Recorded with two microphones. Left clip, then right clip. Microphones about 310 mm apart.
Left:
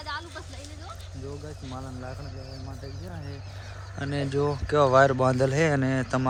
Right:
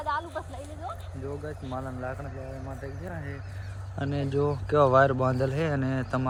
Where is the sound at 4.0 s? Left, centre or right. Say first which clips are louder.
Left 1 dB; centre.